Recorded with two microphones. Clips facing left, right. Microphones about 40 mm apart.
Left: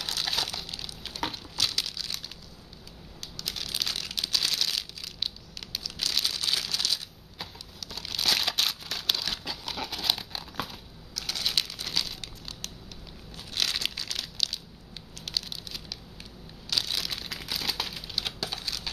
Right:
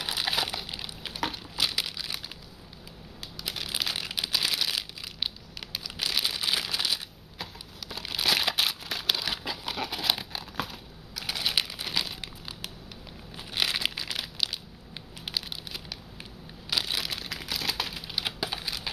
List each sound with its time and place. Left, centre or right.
0.0 s crumpling: centre
3.3 s a sound: centre
7.9 s crumpling: centre
11.1 s crumpling: centre